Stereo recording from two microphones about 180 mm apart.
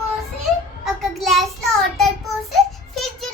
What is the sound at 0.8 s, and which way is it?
Child singing, centre (ahead or behind).